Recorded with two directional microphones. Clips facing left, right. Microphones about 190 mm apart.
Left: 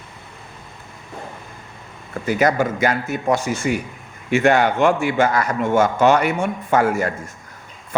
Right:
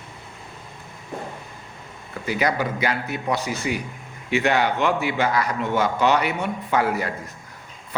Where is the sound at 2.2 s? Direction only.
45° left (ahead or behind).